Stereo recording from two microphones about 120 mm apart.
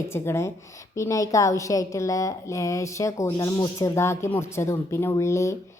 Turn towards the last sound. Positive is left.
turn(degrees=25)  # may be behind; listen again after turning